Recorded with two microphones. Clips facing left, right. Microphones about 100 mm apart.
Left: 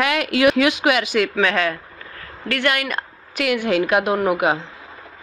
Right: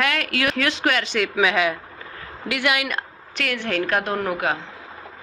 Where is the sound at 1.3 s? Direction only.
10° right (ahead or behind).